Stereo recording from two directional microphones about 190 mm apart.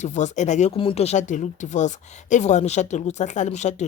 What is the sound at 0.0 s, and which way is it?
Speech, 40° left (ahead or behind).